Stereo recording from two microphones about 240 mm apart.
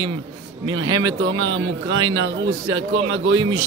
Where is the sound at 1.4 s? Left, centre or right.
Right.